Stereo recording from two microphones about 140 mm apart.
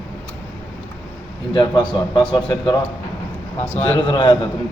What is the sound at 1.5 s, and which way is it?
A man's voice, 35° left (ahead or behind).